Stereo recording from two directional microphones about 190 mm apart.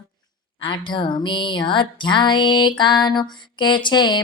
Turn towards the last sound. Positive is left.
turn(degrees=25)  # may be behind; listen again after turning